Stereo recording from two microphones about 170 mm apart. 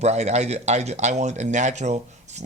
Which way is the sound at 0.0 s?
40° right (ahead or behind).